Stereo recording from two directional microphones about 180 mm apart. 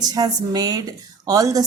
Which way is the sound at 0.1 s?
20° right (ahead or behind).